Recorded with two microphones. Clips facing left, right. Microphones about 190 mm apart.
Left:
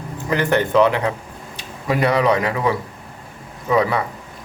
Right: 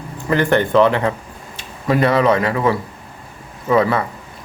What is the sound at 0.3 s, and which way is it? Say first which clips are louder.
Speech: right 3 dB; 10° left (ahead or behind).